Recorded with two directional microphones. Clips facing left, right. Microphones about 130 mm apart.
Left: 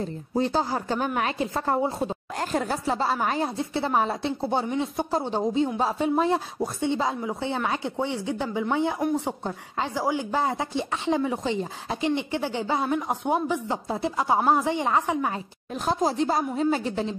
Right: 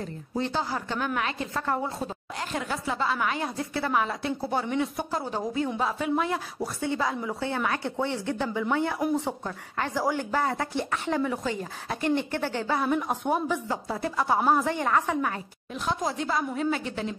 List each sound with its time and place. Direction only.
0.0 s a woman's voice: 35° left (ahead or behind)
2.5 s a woman's voice: 40° left (ahead or behind); by 15.3 s 20° left (ahead or behind)
15.8 s a woman's voice: 35° left (ahead or behind)